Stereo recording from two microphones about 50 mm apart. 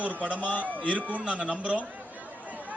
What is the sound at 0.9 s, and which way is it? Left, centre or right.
Speech, right.